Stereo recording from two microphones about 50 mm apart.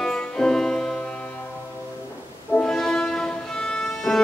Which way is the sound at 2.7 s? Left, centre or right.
Centre.